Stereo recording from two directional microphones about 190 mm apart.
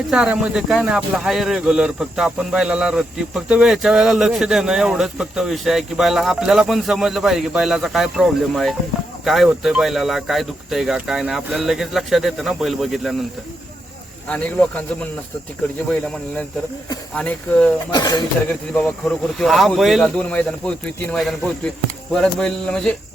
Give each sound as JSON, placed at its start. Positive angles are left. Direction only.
{"t": 0.1, "sound": "a man's voice", "side_deg": -5}
{"t": 14.3, "sound": "speech", "side_deg": 5}
{"t": 17.2, "sound": "speech", "side_deg": 5}
{"t": 17.9, "sound": "speech", "side_deg": 20}
{"t": 18.7, "sound": "a man's voice", "side_deg": 5}